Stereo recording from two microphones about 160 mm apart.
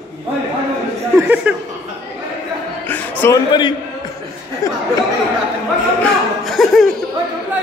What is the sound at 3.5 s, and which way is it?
A man's voice, 30° left (ahead or behind).